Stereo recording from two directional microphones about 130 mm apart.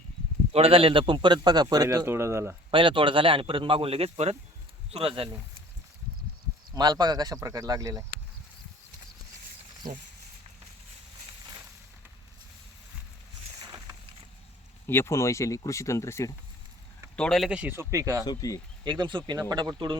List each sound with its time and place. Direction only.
0.5 s speech: 45° right (ahead or behind); by 2.6 s 20° right (ahead or behind)
2.6 s speech: 40° right (ahead or behind)
6.7 s speech: 30° right (ahead or behind)
13.7 s boat: 25° right (ahead or behind)
14.8 s speech: 20° left (ahead or behind)
17.2 s speech: 5° left (ahead or behind)
17.5 s speech: 15° right (ahead or behind)
18.3 s speech: 25° left (ahead or behind)
18.9 s speech: 35° right (ahead or behind)